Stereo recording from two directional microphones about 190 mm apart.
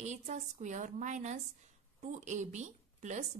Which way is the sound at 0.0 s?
40° right (ahead or behind).